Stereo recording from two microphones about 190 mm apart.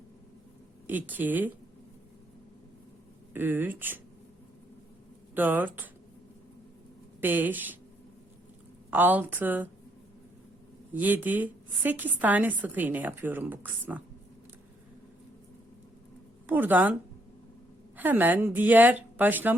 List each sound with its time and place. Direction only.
0.9 s a woman's voice: 10° right (ahead or behind)
3.3 s a woman's voice: 10° right (ahead or behind)
5.3 s a woman's voice: 10° right (ahead or behind)
7.2 s a woman's voice: 10° right (ahead or behind)
8.9 s a woman's voice: 10° right (ahead or behind)
10.9 s a woman's voice: 10° right (ahead or behind)
16.5 s a woman's voice: 10° right (ahead or behind)
17.9 s a woman's voice: 10° right (ahead or behind)